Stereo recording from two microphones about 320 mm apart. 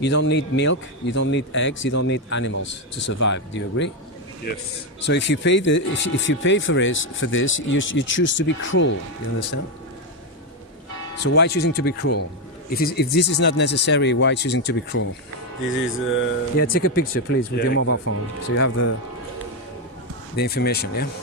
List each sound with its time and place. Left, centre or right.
0.0 s speech: left
4.9 s speech: left
11.3 s speech: left
17.8 s speech: left
20.3 s speech: left